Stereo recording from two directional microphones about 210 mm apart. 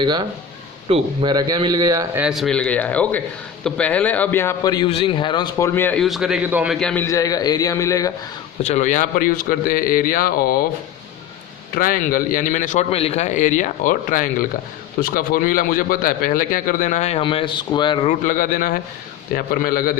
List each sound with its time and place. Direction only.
0.0 s speech: 20° right (ahead or behind)
2.2 s a man's voice: centre (ahead or behind)
6.7 s a man's voice: 5° left (ahead or behind)
8.6 s a man's voice: 35° left (ahead or behind)
11.7 s a man's voice: 40° left (ahead or behind); by 18.1 s 20° left (ahead or behind)
18.3 s a man's voice: 40° left (ahead or behind)